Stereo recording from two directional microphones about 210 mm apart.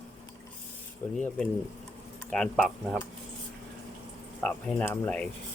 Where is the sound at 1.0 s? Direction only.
10° left (ahead or behind).